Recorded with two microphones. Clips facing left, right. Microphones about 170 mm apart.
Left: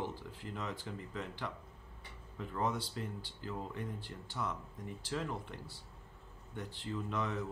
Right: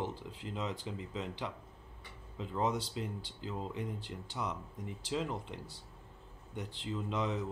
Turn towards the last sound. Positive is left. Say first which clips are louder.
# right 2 dB
turn(degrees=-20)  # may be behind; listen again after turning